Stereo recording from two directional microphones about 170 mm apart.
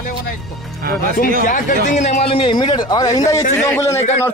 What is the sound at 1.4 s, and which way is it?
A man's voice, 50° left (ahead or behind).